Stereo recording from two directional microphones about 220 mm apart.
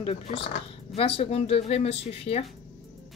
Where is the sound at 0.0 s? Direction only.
25° left (ahead or behind).